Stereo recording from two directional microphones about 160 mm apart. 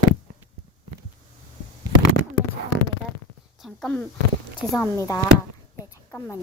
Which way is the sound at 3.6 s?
5° left (ahead or behind).